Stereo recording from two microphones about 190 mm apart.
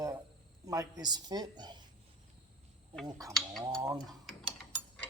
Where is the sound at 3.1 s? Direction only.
20° right (ahead or behind).